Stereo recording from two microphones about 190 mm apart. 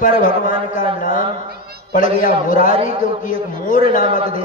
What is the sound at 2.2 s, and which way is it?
Speech, 45° left (ahead or behind).